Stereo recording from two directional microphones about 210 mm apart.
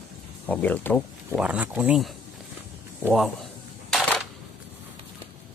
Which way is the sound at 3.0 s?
Centre (ahead or behind).